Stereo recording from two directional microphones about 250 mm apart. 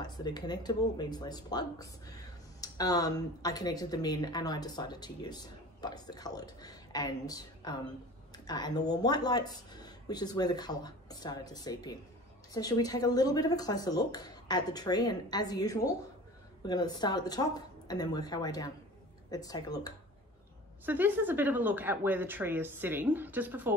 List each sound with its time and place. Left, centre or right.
0.0 s speech: centre
20.8 s speech: centre